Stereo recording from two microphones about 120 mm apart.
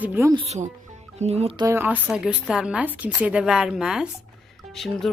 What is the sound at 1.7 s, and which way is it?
Speech, 15° right (ahead or behind).